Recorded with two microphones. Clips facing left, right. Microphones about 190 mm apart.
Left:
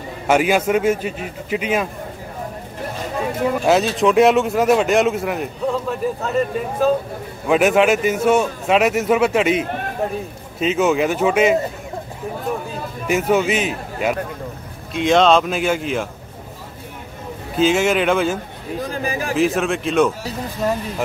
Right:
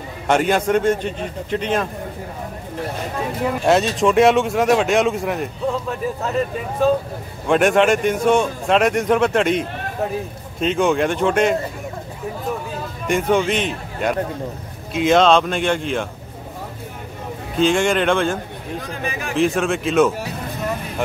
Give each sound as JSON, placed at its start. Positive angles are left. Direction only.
{"t": 0.3, "sound": "a man's voice", "side_deg": 5}
{"t": 3.6, "sound": "speech", "side_deg": 0}
{"t": 13.0, "sound": "speech", "side_deg": 5}
{"t": 17.6, "sound": "speech", "side_deg": 5}
{"t": 19.0, "sound": "a man's voice", "side_deg": 35}
{"t": 19.3, "sound": "speech", "side_deg": 0}